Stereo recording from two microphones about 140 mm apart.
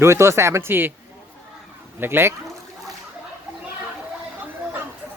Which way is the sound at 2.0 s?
15° right (ahead or behind).